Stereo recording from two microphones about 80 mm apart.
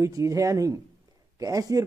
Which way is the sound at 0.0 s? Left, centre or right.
Right.